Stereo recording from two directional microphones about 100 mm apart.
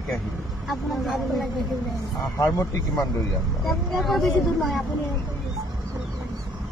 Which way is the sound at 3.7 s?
Centre (ahead or behind).